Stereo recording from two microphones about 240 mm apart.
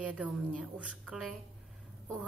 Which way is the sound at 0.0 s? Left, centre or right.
Centre.